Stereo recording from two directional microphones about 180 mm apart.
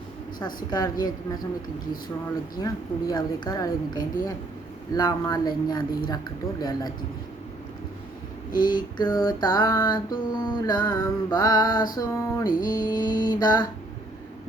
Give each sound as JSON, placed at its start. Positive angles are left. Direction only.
{"t": 0.3, "sound": "female singing", "side_deg": 20}
{"t": 2.6, "sound": "female singing", "side_deg": 20}
{"t": 8.6, "sound": "female singing", "side_deg": 25}
{"t": 12.5, "sound": "music", "side_deg": 50}
{"t": 12.7, "sound": "female singing", "side_deg": 20}